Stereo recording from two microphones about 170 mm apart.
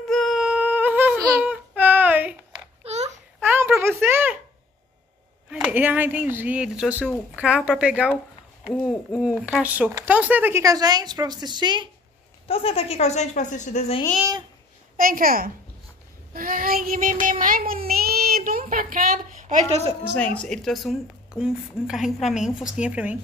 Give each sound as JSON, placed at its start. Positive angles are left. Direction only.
{"t": 0.0, "sound": "humming", "side_deg": 0}
{"t": 1.3, "sound": "a sound", "side_deg": -10}
{"t": 2.8, "sound": "a sound", "side_deg": -40}
{"t": 3.4, "sound": "a sound", "side_deg": -15}
{"t": 5.5, "sound": "speech", "side_deg": -5}
{"t": 12.4, "sound": "speech", "side_deg": 35}
{"t": 15.0, "sound": "a woman's voice", "side_deg": -55}
{"t": 16.3, "sound": "child singing", "side_deg": -55}
{"t": 20.3, "sound": "speech", "side_deg": 5}